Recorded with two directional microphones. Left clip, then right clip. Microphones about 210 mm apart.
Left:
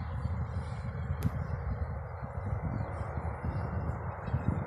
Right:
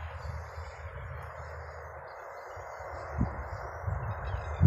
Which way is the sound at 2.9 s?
50° left (ahead or behind).